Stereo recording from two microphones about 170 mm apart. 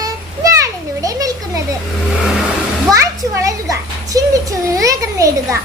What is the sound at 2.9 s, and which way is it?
Children playing, 20° right (ahead or behind).